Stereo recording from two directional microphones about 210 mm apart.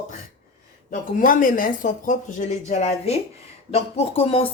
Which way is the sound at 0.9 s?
40° left (ahead or behind).